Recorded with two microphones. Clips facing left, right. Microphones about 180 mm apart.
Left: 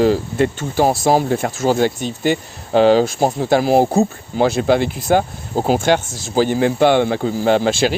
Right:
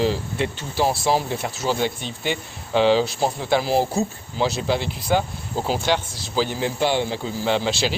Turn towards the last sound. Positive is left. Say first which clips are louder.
# left 7 dB
turn(degrees=50)  # may be behind; listen again after turning